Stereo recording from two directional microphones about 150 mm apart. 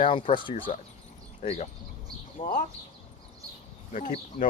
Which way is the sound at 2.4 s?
35° left (ahead or behind).